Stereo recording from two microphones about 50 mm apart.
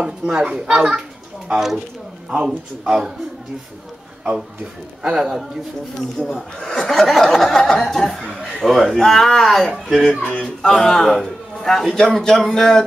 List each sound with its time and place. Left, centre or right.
0.0 s a child's voice: centre
2.2 s a child's voice: centre
5.0 s a child's voice: centre
10.2 s speech: centre